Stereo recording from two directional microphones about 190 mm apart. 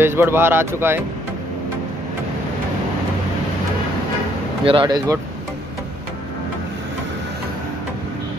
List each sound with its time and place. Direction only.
0.0 s speech: 10° right (ahead or behind)
4.6 s speech: 25° right (ahead or behind)